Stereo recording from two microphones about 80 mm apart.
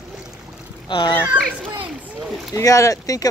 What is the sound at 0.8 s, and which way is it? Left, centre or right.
Speech, left.